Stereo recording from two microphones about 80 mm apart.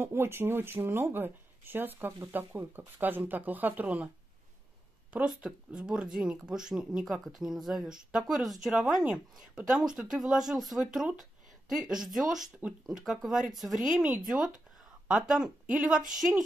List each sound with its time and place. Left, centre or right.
0.0 s speech: right
5.1 s speech: centre